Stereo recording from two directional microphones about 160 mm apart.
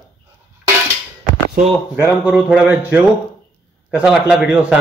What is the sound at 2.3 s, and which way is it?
Speech, centre (ahead or behind).